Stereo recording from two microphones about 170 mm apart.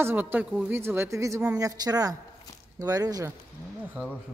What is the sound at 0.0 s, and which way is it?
A woman's voice, 10° right (ahead or behind).